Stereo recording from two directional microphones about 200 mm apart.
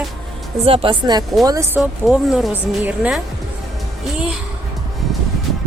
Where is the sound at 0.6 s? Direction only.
25° right (ahead or behind).